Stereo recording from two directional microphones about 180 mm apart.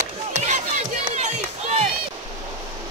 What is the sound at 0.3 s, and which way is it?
Run, 40° right (ahead or behind).